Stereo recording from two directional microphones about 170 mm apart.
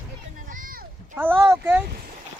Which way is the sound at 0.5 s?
55° right (ahead or behind).